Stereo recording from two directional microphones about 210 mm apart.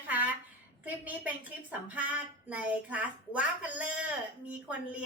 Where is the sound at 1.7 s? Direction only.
5° right (ahead or behind).